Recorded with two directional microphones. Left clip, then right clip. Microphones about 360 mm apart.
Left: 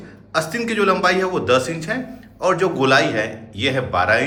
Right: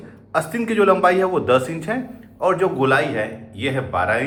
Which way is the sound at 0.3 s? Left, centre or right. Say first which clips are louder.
Right 1 dB; centre.